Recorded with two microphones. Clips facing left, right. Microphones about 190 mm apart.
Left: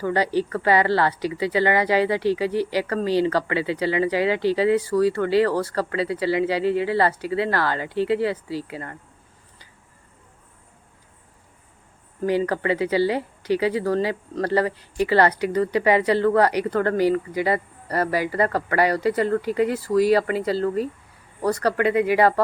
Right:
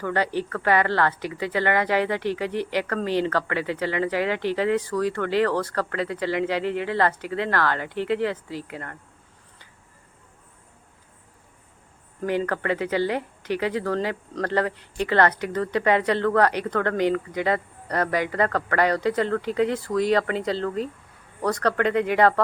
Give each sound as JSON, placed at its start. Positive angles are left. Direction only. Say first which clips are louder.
{"t": 0.0, "sound": "speech", "louder": "left 3 dB", "side_deg": 10}
{"t": 12.2, "sound": "speech", "louder": "left 3 dB", "side_deg": 10}